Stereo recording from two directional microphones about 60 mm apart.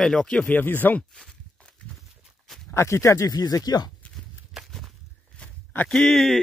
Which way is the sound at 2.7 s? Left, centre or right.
Left.